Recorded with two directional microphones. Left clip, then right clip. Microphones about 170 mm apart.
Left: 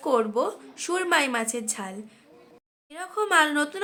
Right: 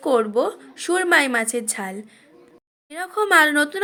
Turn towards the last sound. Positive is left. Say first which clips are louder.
# right 6 dB
turn(degrees=-30)  # may be behind; listen again after turning